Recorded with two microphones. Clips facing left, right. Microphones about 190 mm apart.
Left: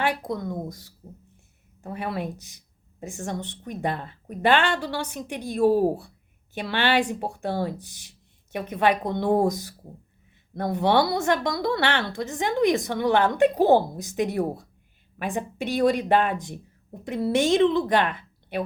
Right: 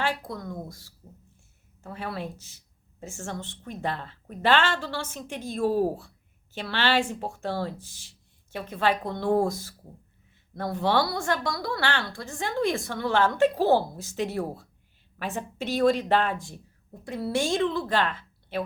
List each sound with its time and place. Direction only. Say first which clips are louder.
0.0 s a woman's voice: left 4 dB; 20° left (ahead or behind)